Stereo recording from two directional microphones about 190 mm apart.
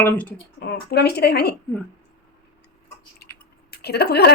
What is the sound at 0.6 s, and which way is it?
Speech, 55° left (ahead or behind).